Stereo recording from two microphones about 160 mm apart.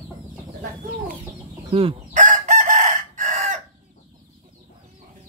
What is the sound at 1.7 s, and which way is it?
Speech, 35° right (ahead or behind).